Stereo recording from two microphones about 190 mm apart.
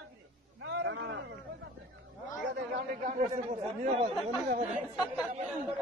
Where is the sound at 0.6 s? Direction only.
75° right (ahead or behind).